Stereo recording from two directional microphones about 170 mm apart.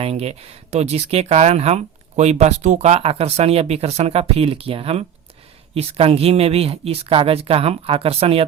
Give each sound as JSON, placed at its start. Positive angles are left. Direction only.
{"t": 0.0, "sound": "speech", "side_deg": -35}